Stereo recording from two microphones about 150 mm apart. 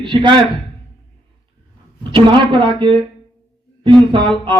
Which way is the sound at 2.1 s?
35° right (ahead or behind).